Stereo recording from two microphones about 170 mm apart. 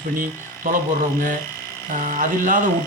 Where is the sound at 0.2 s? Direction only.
50° right (ahead or behind).